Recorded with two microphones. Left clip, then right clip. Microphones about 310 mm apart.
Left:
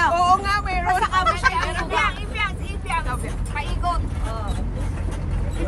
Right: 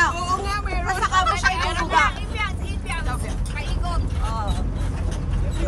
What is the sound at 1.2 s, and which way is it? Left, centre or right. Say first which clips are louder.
Vehicle: left 1 dB; centre.